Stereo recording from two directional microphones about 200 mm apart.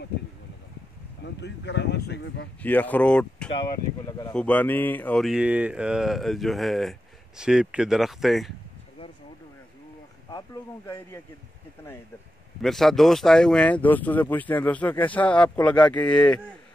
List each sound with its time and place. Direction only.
1.2 s speech: 60° left (ahead or behind)
2.6 s speech: 10° left (ahead or behind)
10.3 s speech: 15° left (ahead or behind)
12.6 s speech: centre (ahead or behind)